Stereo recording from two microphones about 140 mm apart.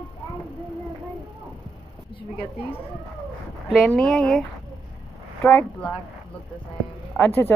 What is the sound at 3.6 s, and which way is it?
Speech, centre (ahead or behind).